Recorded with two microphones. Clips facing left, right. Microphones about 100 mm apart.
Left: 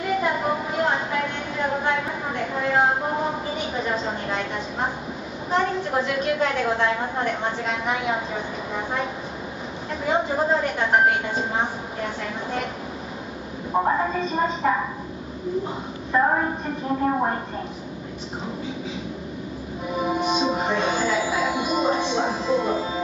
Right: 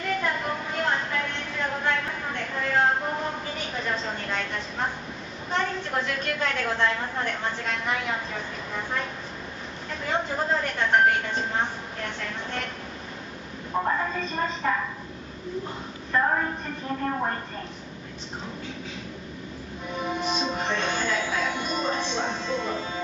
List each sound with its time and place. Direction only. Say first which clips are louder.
0.0 s a sound: left 5 dB; 10° left (ahead or behind)
5.5 s music: left 5 dB; 5° left (ahead or behind)
10.0 s a woman's voice: left 5 dB; 5° left (ahead or behind)
13.7 s a woman's voice: left 5 dB; 15° left (ahead or behind)
16.1 s a woman's voice: left 4 dB; 15° left (ahead or behind)
19.9 s music: left 5 dB; 5° left (ahead or behind)